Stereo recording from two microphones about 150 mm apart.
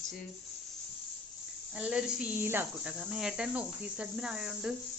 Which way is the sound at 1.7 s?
10° right (ahead or behind).